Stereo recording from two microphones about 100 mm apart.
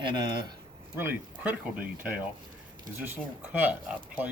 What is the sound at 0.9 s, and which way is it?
Speech, 20° right (ahead or behind).